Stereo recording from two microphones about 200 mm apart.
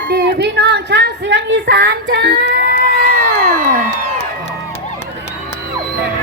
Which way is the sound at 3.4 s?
45° right (ahead or behind).